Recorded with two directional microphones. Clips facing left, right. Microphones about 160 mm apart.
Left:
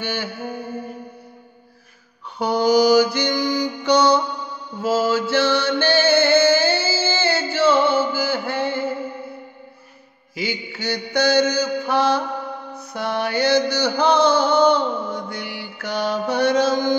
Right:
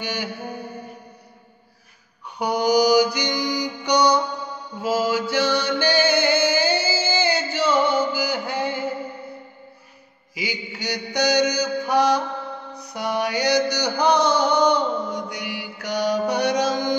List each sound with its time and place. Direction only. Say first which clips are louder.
0.0 s mantra: left 2 dB; 15° right (ahead or behind)
2.3 s mantra: left 2 dB; 15° right (ahead or behind)
3.3 s music: left 3 dB; 15° right (ahead or behind)
4.8 s mantra: left 2 dB; 15° right (ahead or behind)
10.3 s mantra: left 3 dB; 10° right (ahead or behind)
12.7 s music: even; 15° right (ahead or behind)